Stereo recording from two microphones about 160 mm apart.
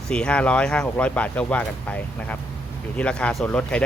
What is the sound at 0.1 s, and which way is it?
Speech, 5° left (ahead or behind).